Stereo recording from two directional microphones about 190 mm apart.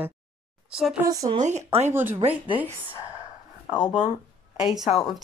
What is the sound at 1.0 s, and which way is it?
Speech, 20° right (ahead or behind).